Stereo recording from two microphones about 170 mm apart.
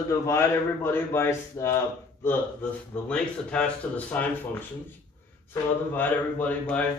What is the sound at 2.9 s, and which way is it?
Speech, 5° left (ahead or behind).